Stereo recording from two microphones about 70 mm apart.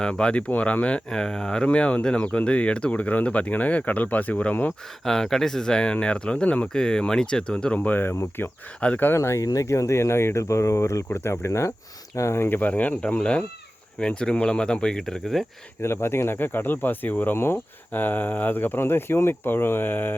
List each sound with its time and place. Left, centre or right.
0.0 s speech: centre
5.0 s speech: centre; by 8.4 s left
8.8 s speech: left
9.1 s speech: left
9.4 s speech: left
12.5 s speech: left; by 15.4 s centre
15.8 s speech: left